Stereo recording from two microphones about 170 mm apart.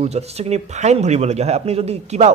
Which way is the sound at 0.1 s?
40° right (ahead or behind).